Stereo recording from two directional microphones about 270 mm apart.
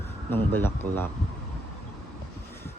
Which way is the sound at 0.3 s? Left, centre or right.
Centre.